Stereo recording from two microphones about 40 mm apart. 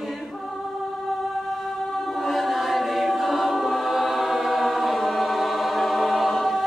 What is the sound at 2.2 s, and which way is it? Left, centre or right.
Choir, centre.